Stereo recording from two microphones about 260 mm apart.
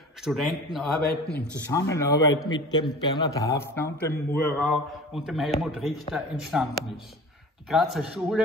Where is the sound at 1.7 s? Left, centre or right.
Centre.